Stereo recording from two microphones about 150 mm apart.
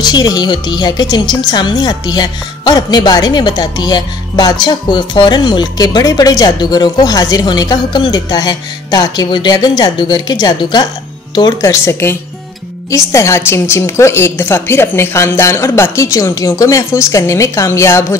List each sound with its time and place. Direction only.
0.0 s a woman's voice: 25° left (ahead or behind)